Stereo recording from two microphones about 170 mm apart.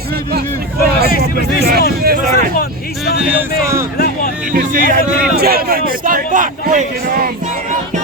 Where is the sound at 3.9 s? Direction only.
65° left (ahead or behind).